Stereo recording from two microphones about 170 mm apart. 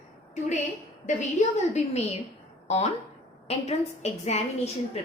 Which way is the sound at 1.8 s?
40° left (ahead or behind).